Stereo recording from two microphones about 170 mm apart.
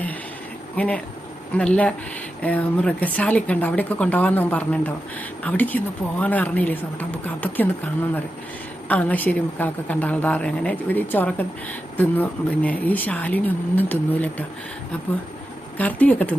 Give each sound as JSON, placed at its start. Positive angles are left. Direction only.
{"t": 0.8, "sound": "a woman's voice", "side_deg": 10}
{"t": 8.9, "sound": "a woman's voice", "side_deg": 10}
{"t": 15.8, "sound": "a woman's voice", "side_deg": 10}